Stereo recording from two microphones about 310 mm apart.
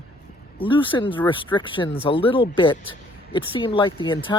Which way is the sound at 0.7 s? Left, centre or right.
Centre.